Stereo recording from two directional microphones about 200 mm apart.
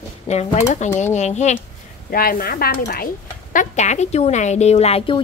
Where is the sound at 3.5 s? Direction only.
40° left (ahead or behind).